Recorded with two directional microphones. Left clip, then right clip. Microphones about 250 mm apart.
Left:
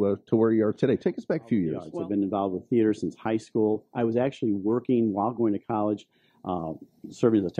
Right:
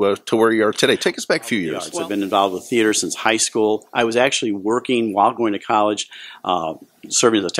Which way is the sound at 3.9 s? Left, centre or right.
Centre.